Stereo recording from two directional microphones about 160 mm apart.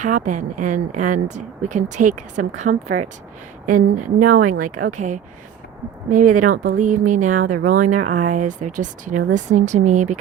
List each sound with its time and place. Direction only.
0.0 s a woman's voice: 55° right (ahead or behind)